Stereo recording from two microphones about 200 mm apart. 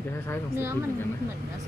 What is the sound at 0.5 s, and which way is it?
Speech, 10° right (ahead or behind).